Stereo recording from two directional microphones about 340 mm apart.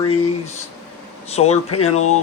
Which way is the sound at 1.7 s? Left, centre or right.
Left.